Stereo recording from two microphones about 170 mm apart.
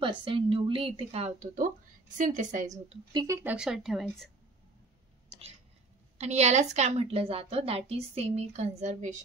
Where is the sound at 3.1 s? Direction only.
20° right (ahead or behind).